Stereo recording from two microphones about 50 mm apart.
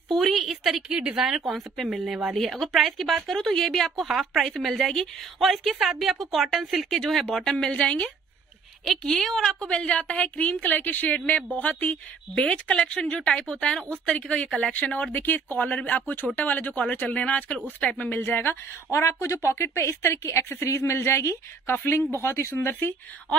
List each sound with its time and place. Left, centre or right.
0.1 s a sound: centre
0.8 s a woman's voice: centre
1.2 s a woman's voice: centre
9.0 s a woman's voice: centre
14.7 s a woman's voice: left
18.9 s a woman's voice: left